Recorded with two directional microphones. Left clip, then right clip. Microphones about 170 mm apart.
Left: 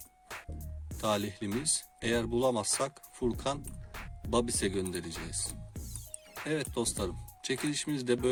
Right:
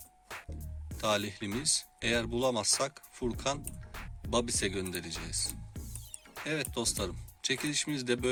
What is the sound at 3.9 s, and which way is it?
Music, centre (ahead or behind).